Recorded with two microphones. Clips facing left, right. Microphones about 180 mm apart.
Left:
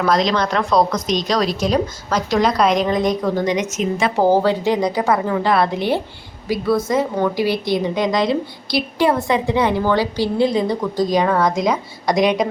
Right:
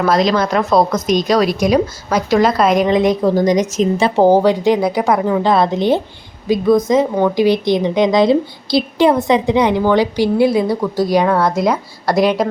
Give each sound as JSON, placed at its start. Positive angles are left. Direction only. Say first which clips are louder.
{"t": 0.0, "sound": "a woman's voice", "louder": "right 3 dB", "side_deg": -5}
{"t": 2.8, "sound": "a woman's voice", "louder": "right 5 dB", "side_deg": -25}
{"t": 3.2, "sound": "a woman's voice", "louder": "right 6 dB", "side_deg": -40}
{"t": 4.3, "sound": "a woman's voice", "louder": "right 3 dB", "side_deg": -15}